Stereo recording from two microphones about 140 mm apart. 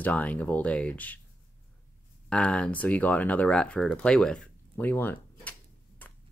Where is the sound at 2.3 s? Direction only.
10° left (ahead or behind).